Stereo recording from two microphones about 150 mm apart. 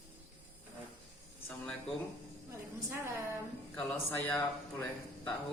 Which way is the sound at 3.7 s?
15° left (ahead or behind).